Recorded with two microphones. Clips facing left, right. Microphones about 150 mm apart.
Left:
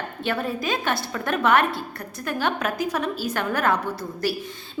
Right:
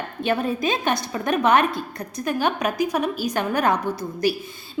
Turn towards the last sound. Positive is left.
turn(degrees=-15)  # may be behind; listen again after turning